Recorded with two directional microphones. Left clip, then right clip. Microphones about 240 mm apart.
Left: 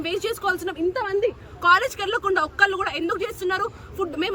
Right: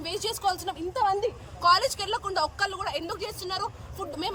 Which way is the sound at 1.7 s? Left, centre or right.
Left.